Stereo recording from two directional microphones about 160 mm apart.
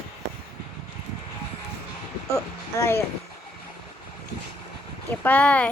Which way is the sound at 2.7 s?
15° left (ahead or behind).